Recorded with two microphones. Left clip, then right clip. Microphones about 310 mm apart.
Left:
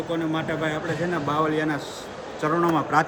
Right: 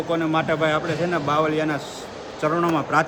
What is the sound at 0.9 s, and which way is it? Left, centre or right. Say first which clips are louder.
Speech: right 3 dB; centre.